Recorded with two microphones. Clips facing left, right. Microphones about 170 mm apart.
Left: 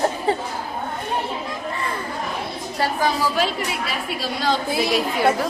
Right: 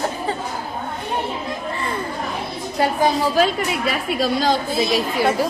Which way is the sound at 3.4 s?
45° right (ahead or behind).